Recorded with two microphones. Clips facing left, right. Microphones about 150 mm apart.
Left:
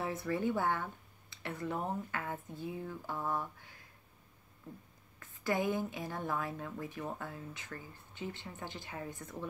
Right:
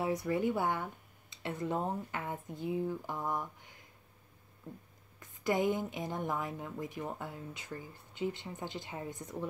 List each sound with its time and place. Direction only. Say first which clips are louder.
0.0 s a woman's voice: right 3 dB; 15° right (ahead or behind)
5.2 s a woman's voice: right 3 dB; 20° right (ahead or behind)